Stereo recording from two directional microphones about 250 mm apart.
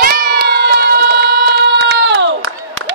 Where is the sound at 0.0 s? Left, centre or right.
Right.